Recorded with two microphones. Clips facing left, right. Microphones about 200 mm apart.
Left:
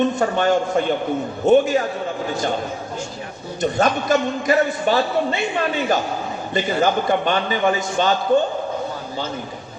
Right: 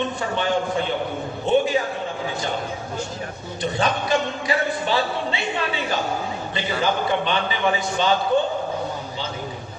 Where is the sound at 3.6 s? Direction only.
45° left (ahead or behind).